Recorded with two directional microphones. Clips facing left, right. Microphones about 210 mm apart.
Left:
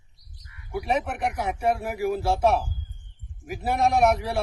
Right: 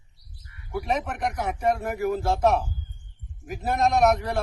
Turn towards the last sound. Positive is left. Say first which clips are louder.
# even
turn(degrees=10)  # may be behind; listen again after turning